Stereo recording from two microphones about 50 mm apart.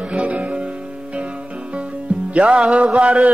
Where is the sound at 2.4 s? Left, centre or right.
Centre.